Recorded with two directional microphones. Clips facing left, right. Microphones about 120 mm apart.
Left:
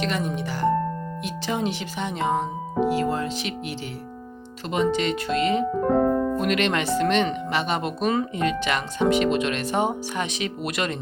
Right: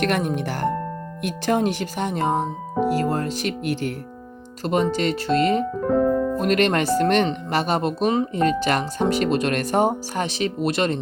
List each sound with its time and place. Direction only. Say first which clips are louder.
0.0 s speech: right 4 dB; 55° right (ahead or behind); by 8.3 s 25° right (ahead or behind)
8.3 s speech: right 4 dB; 40° right (ahead or behind)